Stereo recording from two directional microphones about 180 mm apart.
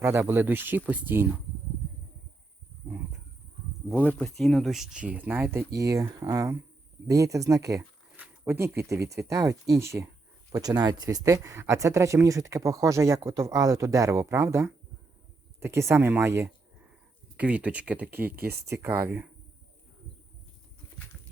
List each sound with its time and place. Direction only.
0.0 s speech: 15° right (ahead or behind)
3.8 s speech: 10° left (ahead or behind); by 19.3 s 10° right (ahead or behind)